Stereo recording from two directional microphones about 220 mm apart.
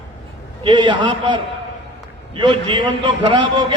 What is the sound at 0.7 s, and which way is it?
A man's voice, 20° right (ahead or behind).